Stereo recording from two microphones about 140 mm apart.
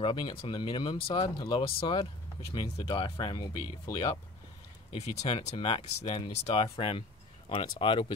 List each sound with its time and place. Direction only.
0.0 s speech: 35° left (ahead or behind)